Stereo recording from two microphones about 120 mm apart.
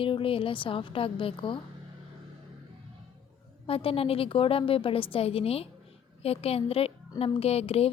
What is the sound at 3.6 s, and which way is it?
A woman's voice, 50° left (ahead or behind).